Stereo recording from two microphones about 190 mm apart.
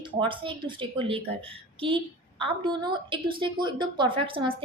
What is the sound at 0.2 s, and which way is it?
A woman's voice, 25° right (ahead or behind).